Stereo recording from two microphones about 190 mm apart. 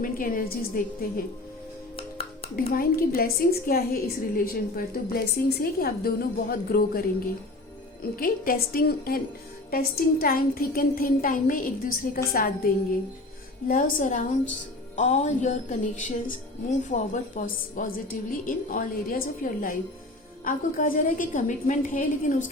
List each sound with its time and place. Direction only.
0.0 s a woman's voice: 50° left (ahead or behind)
2.0 s music: 30° left (ahead or behind)
2.6 s a woman's voice: 50° left (ahead or behind)
8.1 s a woman's voice: 50° left (ahead or behind)